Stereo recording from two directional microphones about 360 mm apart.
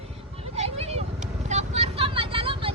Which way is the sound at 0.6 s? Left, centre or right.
Centre.